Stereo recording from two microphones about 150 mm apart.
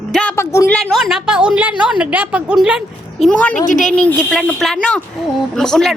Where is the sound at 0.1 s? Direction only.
5° left (ahead or behind).